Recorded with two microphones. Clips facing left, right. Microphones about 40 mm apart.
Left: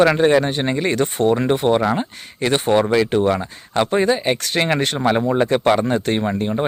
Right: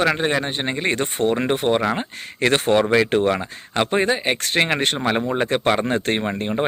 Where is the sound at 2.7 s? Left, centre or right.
Right.